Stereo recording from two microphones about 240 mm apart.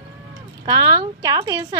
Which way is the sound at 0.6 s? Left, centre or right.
Centre.